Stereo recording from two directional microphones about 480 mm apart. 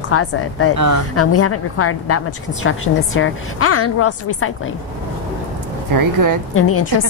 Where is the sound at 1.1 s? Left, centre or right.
Left.